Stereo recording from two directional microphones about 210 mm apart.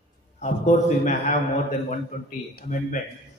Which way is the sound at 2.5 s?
40° left (ahead or behind).